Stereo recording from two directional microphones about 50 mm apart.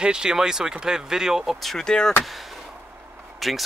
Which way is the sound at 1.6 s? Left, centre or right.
Centre.